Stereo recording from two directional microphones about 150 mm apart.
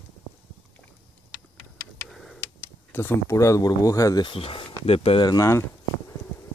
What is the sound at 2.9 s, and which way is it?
Speech, 15° left (ahead or behind).